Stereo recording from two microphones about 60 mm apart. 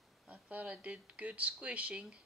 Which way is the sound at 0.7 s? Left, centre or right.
Centre.